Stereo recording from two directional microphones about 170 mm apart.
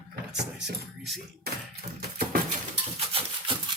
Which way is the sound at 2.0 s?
55° right (ahead or behind).